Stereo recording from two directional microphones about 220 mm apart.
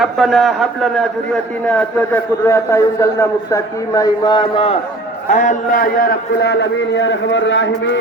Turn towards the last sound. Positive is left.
turn(degrees=55)  # may be behind; listen again after turning